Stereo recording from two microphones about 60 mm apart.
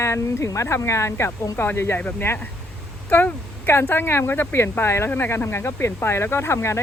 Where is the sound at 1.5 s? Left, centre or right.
Left.